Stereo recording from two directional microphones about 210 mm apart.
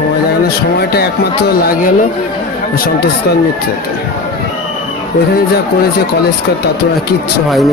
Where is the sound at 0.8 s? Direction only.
50° left (ahead or behind).